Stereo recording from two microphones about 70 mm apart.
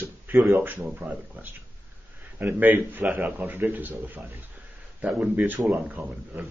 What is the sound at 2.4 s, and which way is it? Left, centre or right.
Speech, right.